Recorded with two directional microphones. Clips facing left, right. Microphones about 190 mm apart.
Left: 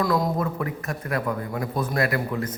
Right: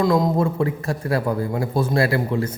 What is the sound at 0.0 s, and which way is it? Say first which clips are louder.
A man's voice: right 5 dB; 25° right (ahead or behind).